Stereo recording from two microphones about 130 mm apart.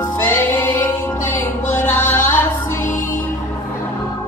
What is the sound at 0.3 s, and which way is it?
Music, 20° left (ahead or behind).